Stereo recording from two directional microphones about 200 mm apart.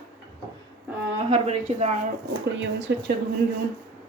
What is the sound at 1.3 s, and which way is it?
Speech, 35° right (ahead or behind).